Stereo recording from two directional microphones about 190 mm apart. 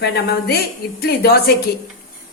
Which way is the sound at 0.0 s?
55° left (ahead or behind).